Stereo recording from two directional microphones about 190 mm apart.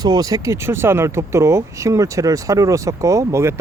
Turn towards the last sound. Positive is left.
turn(degrees=-15)  # may be behind; listen again after turning